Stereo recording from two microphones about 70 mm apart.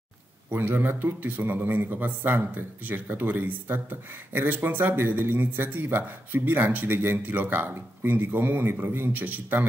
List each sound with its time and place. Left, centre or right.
0.5 s a man's voice: right